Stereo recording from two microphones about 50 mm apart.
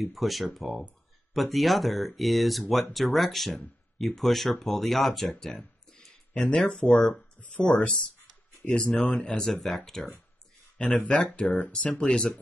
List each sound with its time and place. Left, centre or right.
0.0 s speech: centre
5.9 s a sound: centre
6.7 s speech: centre
7.4 s speech: left
9.5 s speech: centre
10.8 s speech: left
12.0 s speech: centre